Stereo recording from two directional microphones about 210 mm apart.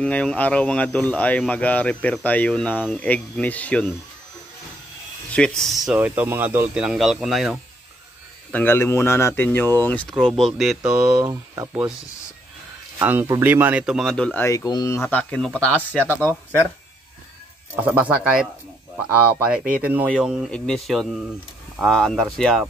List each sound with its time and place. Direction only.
0.0 s speech: 5° left (ahead or behind)
5.3 s speech: 5° left (ahead or behind)
11.1 s speech: 15° right (ahead or behind)
13.0 s speech: 10° right (ahead or behind); by 15.5 s 5° left (ahead or behind)
16.1 s speech: 10° right (ahead or behind)
17.8 s speech: 5° right (ahead or behind)